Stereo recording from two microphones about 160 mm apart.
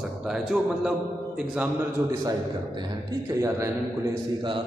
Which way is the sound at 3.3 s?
20° right (ahead or behind).